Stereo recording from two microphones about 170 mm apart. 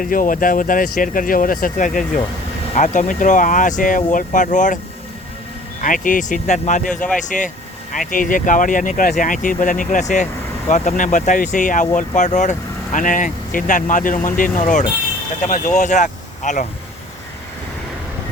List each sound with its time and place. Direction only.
0.0 s speech: 55° left (ahead or behind)
5.8 s speech: 50° left (ahead or behind)